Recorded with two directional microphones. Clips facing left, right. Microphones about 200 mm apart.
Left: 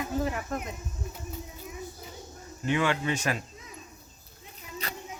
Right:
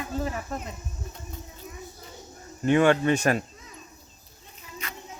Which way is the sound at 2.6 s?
50° right (ahead or behind).